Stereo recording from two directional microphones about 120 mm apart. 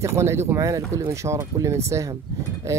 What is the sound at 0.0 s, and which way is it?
Speech, 25° right (ahead or behind).